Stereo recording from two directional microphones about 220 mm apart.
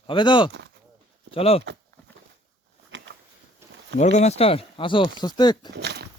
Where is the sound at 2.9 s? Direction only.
55° right (ahead or behind).